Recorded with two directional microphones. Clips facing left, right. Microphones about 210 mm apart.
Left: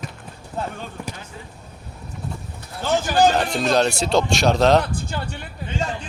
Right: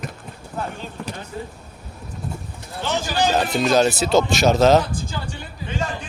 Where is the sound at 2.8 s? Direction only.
45° left (ahead or behind).